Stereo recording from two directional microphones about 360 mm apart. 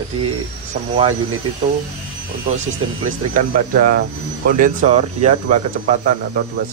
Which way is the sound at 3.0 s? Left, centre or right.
Right.